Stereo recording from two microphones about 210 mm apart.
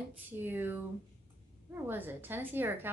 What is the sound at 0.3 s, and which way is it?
A woman's voice, 10° right (ahead or behind).